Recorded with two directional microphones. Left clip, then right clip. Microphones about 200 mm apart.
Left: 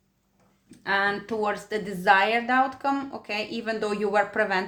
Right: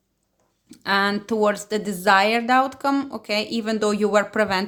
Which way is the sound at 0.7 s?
40° right (ahead or behind).